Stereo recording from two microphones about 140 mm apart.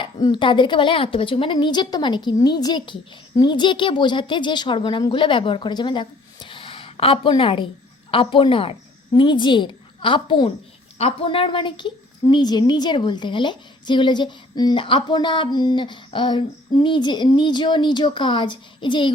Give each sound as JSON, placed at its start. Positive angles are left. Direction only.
{"t": 0.0, "sound": "a woman's voice", "side_deg": 35}